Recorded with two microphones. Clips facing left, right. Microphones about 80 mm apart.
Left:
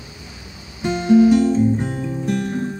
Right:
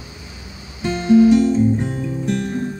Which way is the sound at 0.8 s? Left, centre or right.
Centre.